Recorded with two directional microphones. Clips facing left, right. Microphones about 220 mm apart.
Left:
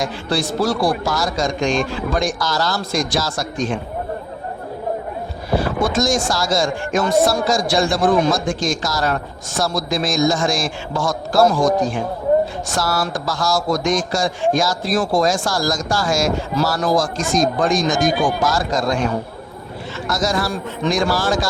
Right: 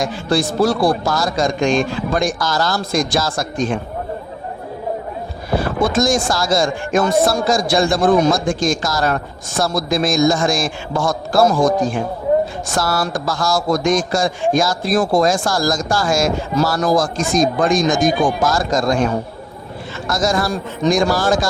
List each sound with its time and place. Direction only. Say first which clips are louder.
0.0 s speech: right 3 dB; 50° right (ahead or behind)
5.5 s boat: even; 5° left (ahead or behind)
6.0 s speech: right 3 dB; 55° right (ahead or behind)
20.1 s speech: right 2 dB; 50° right (ahead or behind)